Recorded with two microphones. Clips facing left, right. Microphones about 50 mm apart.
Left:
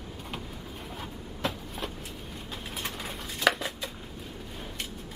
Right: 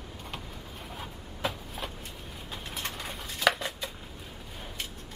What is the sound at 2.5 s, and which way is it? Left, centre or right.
Bird, centre.